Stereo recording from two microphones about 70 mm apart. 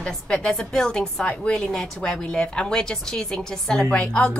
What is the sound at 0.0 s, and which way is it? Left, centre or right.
A woman's voice, centre.